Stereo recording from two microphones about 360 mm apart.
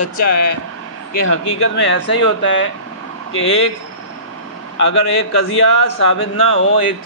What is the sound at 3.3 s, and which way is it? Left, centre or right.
Speech, left.